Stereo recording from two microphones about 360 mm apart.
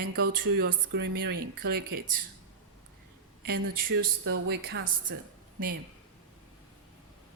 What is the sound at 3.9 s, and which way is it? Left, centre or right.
Speech, right.